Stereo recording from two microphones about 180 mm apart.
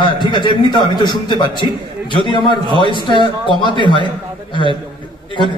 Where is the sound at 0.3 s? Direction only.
25° left (ahead or behind).